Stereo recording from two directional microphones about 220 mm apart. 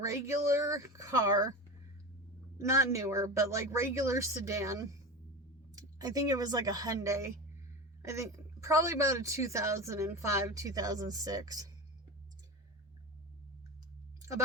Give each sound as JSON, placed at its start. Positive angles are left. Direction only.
{"t": 0.0, "sound": "a woman's voice", "side_deg": -15}
{"t": 2.6, "sound": "a woman's voice", "side_deg": -15}